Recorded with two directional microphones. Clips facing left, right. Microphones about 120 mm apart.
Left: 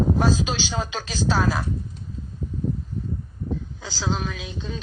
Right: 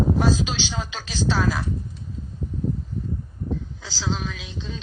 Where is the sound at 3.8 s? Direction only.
50° left (ahead or behind).